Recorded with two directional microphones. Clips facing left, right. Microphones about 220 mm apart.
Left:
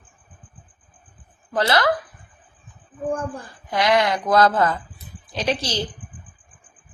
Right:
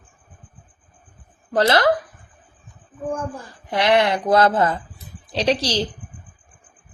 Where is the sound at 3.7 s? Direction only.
25° right (ahead or behind).